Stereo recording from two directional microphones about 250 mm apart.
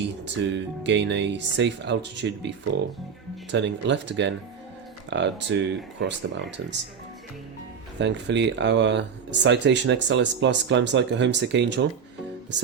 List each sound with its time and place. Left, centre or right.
0.4 s speech: right
3.5 s speech: right
7.9 s speech: right